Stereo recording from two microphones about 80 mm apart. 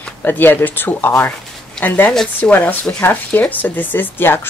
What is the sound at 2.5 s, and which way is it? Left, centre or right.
Speech, left.